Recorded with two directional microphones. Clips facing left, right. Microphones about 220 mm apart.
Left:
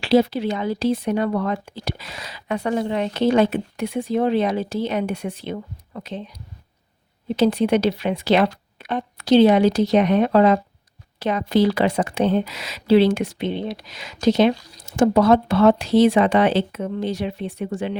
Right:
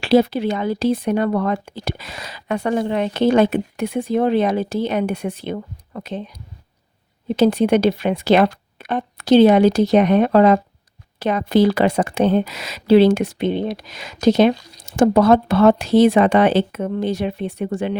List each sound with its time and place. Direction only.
0.0 s speech: 55° right (ahead or behind)
7.3 s speech: 50° right (ahead or behind)